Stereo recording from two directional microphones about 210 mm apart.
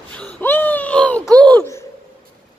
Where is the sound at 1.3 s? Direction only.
5° left (ahead or behind).